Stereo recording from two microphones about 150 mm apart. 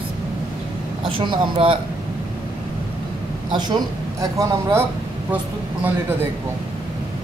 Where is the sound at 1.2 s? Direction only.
35° right (ahead or behind).